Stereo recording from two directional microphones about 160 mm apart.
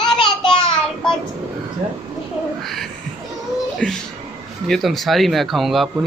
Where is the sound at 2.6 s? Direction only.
Centre (ahead or behind).